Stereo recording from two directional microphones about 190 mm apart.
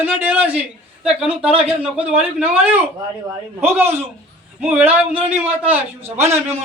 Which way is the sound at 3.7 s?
10° right (ahead or behind).